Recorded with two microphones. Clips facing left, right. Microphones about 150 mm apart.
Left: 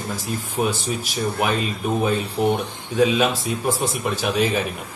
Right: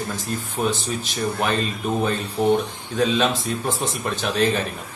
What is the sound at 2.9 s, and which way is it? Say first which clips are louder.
A man's voice: left 2 dB; 10° left (ahead or behind).